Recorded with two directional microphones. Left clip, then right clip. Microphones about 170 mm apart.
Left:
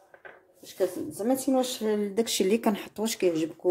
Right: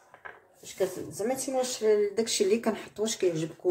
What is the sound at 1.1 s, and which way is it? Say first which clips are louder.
Speech: left 5 dB; 40° left (ahead or behind).